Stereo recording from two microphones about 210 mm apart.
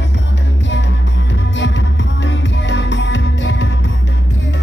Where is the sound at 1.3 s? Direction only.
60° left (ahead or behind).